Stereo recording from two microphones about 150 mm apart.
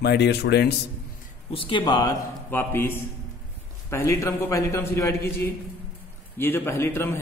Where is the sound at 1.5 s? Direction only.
35° left (ahead or behind).